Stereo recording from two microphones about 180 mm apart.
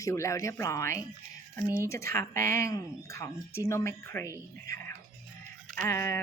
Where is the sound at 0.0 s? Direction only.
15° left (ahead or behind).